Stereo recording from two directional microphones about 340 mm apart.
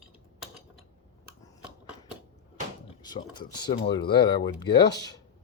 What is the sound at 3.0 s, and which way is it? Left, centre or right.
Speech, centre.